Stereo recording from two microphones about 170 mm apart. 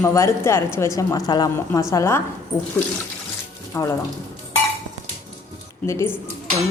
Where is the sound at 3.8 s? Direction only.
15° left (ahead or behind).